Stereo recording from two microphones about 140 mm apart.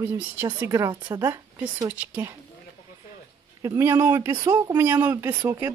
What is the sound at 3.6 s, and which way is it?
Speech, 20° right (ahead or behind).